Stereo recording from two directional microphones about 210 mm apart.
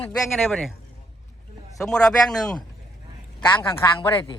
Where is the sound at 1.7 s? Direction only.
Centre (ahead or behind).